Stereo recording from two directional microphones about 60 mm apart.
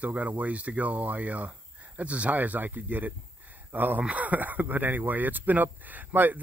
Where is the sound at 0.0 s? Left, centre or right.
Right.